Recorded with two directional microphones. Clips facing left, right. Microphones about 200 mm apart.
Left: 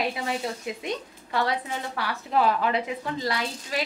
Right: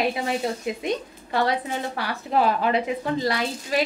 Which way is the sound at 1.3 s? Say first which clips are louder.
Right 3 dB; 20° right (ahead or behind).